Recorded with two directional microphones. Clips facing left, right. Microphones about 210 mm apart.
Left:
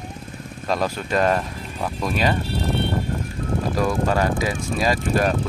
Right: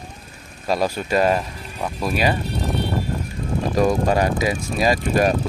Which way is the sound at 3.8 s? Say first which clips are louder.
Right 4 dB; 15° right (ahead or behind).